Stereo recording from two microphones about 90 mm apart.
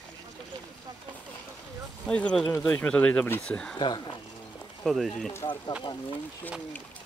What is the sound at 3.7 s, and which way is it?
Speech, 60° left (ahead or behind).